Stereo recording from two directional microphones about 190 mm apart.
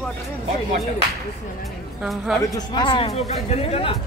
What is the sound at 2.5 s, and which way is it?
Speech, 25° left (ahead or behind).